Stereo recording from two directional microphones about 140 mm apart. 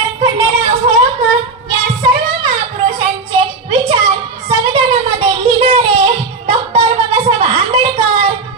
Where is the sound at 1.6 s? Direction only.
35° right (ahead or behind).